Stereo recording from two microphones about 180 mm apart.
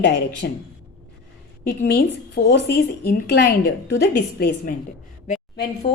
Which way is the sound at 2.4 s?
65° left (ahead or behind).